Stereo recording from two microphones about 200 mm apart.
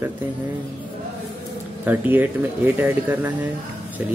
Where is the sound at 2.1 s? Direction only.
10° right (ahead or behind).